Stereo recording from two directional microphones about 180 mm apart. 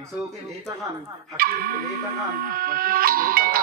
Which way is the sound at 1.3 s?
55° right (ahead or behind).